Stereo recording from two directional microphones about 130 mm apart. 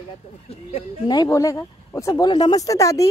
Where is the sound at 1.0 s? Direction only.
30° left (ahead or behind).